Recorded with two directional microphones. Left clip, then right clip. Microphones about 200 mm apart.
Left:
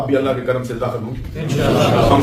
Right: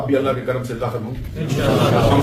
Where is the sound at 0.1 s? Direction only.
15° left (ahead or behind).